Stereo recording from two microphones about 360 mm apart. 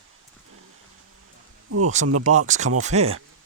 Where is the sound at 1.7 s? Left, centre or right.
Right.